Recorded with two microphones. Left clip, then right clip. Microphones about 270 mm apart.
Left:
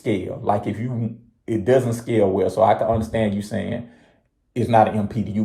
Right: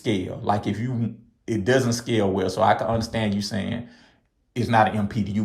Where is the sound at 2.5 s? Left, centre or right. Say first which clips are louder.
Left 3 dB; right.